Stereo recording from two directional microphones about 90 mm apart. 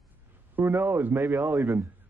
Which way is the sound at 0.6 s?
20° right (ahead or behind).